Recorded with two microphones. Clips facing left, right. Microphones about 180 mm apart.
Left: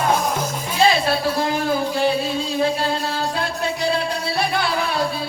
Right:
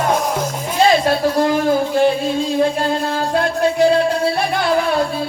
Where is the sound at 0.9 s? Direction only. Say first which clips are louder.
Right 6 dB; 45° right (ahead or behind).